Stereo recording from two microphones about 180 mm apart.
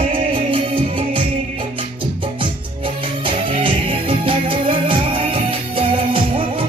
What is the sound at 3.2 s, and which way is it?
Music, 30° right (ahead or behind).